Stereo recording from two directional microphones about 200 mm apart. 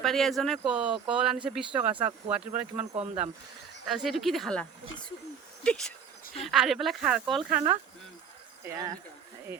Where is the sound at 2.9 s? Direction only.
30° right (ahead or behind).